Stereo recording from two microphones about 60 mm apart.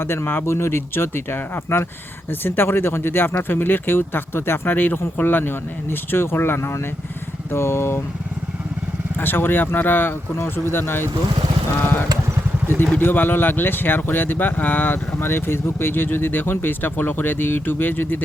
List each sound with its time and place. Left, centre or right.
0.0 s speech: left
7.5 s vehicle: left
9.1 s speech: left
12.6 s speech: left